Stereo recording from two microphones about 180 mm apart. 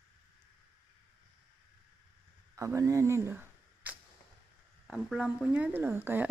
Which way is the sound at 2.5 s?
15° right (ahead or behind).